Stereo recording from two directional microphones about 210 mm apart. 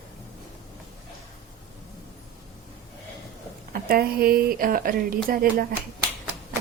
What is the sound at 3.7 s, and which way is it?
Speech, 45° right (ahead or behind).